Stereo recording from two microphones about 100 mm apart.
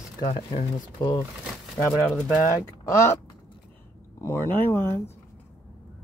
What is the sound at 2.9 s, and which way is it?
Speech, 25° left (ahead or behind).